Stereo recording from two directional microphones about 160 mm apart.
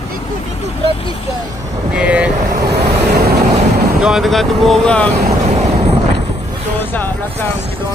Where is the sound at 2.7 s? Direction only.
80° right.